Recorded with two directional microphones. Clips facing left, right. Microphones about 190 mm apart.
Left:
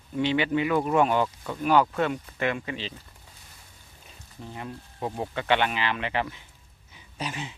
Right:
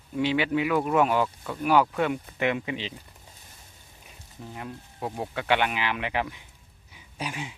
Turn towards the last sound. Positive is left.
turn(degrees=-10)  # may be behind; listen again after turning